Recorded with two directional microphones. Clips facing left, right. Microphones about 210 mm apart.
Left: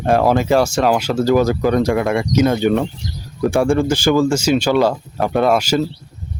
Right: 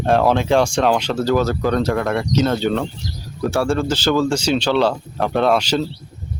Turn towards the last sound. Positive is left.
turn(degrees=10)  # may be behind; listen again after turning